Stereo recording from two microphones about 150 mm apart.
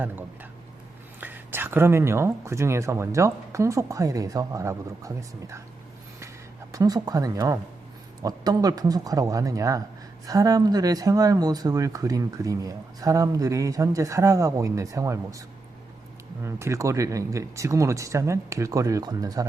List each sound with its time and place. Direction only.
1.2 s speech: 15° right (ahead or behind)
6.7 s speech: 25° right (ahead or behind)